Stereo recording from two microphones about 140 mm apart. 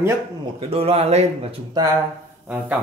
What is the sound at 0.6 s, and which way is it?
Speech, 45° right (ahead or behind).